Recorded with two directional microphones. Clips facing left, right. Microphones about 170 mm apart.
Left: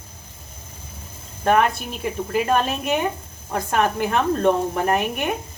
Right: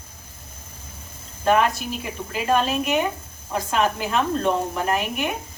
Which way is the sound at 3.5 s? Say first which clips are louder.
Left 1 dB; 55° left (ahead or behind).